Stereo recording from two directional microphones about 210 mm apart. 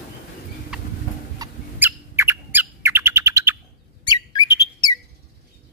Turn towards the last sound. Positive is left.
turn(degrees=20)  # may be behind; listen again after turning